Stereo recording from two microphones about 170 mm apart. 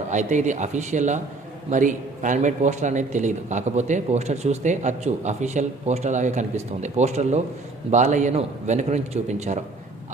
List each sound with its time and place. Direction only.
0.1 s a man's voice: 45° right (ahead or behind)